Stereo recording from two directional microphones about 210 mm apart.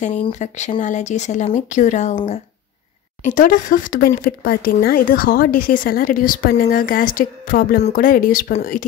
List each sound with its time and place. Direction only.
0.3 s speech: 35° left (ahead or behind)